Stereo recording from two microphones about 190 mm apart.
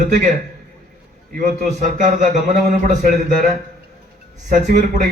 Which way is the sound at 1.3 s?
45° right (ahead or behind).